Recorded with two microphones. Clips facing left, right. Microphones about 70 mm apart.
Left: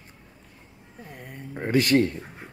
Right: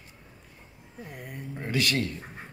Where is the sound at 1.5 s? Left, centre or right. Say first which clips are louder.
Left 8 dB; left.